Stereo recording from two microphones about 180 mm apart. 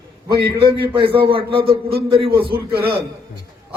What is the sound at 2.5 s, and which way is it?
Speech, 60° right (ahead or behind).